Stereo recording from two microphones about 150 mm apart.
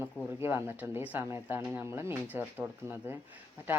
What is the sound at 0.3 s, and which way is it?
Speech, 15° right (ahead or behind).